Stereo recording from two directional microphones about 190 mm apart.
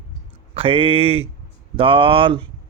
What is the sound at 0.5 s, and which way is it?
Speech, 30° right (ahead or behind).